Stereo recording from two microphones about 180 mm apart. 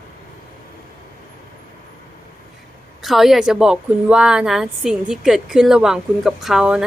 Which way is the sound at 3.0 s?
Centre (ahead or behind).